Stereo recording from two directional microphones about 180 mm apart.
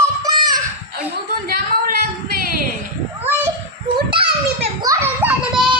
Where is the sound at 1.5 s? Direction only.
55° right (ahead or behind).